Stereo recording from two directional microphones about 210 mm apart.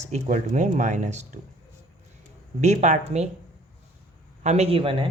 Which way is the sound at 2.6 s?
30° right (ahead or behind).